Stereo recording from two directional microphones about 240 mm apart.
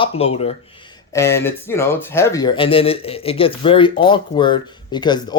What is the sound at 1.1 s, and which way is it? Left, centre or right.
Speech, centre.